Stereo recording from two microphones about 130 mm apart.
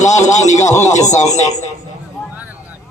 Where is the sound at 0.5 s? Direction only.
25° left (ahead or behind).